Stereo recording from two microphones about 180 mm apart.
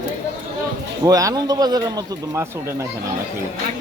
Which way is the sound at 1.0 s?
20° right (ahead or behind).